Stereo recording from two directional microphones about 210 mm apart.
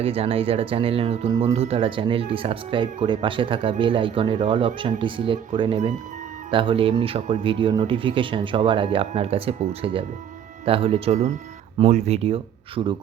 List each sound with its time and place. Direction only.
0.0 s speech: 25° right (ahead or behind)